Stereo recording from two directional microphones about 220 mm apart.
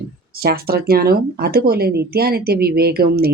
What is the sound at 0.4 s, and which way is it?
Speech, 45° right (ahead or behind).